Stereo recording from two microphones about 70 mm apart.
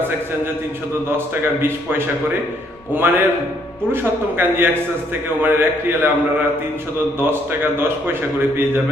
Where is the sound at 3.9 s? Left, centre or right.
Right.